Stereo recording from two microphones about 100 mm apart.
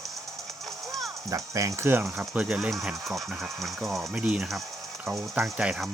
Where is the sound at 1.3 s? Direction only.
35° right (ahead or behind).